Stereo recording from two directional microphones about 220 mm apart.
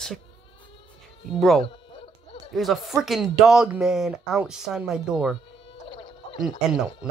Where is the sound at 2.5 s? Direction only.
Centre (ahead or behind).